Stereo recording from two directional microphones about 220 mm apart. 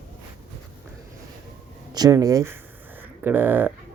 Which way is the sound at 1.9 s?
15° right (ahead or behind).